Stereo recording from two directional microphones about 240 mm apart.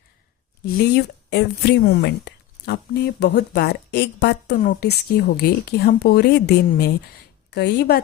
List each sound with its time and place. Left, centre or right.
0.6 s a woman's voice: left